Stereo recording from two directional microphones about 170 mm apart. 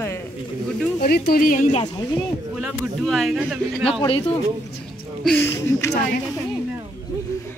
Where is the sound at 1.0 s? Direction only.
65° left (ahead or behind).